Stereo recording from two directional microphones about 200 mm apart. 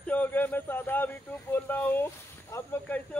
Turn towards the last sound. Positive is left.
turn(degrees=10)  # may be behind; listen again after turning